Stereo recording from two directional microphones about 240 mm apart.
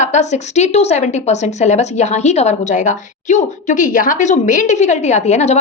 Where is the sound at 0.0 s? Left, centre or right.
Left.